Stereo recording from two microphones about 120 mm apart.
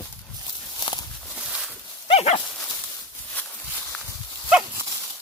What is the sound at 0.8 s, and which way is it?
Walk, 35° left (ahead or behind).